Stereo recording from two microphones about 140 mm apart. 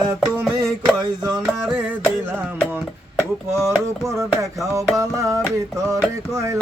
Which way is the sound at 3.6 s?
20° right (ahead or behind).